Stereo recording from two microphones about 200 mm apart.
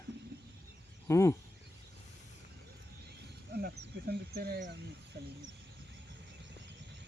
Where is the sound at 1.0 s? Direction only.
15° left (ahead or behind).